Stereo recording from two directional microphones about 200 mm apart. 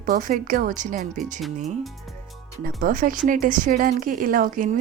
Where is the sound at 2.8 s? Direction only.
45° right (ahead or behind).